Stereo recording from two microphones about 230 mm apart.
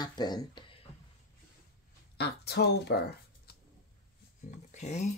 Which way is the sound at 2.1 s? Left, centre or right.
Left.